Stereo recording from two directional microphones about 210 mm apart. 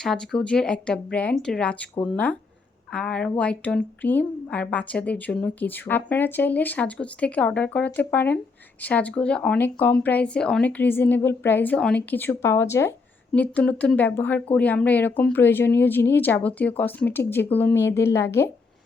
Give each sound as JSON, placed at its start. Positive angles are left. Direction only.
{"t": 0.0, "sound": "a woman's voice", "side_deg": 0}